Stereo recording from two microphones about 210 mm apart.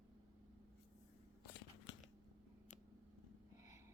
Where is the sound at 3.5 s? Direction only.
15° right (ahead or behind).